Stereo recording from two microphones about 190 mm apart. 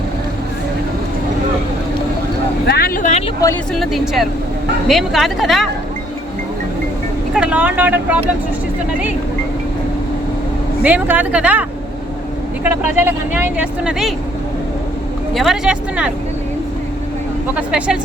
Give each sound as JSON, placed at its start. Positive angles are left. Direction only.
{"t": 2.6, "sound": "vehicle", "side_deg": 55}
{"t": 3.8, "sound": "speech", "side_deg": 0}
{"t": 7.3, "sound": "speech", "side_deg": -5}
{"t": 10.8, "sound": "speech", "side_deg": -10}
{"t": 12.6, "sound": "speech", "side_deg": -10}
{"t": 15.4, "sound": "speech", "side_deg": -5}
{"t": 17.5, "sound": "speech", "side_deg": -5}